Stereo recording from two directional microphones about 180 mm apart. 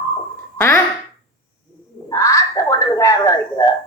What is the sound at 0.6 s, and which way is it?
Speech, 10° left (ahead or behind).